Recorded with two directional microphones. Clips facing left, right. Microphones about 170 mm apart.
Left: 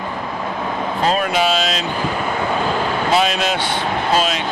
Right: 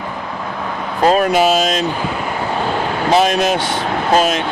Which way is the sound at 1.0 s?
45° right (ahead or behind).